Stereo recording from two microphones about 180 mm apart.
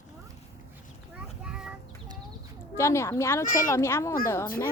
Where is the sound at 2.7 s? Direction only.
15° left (ahead or behind).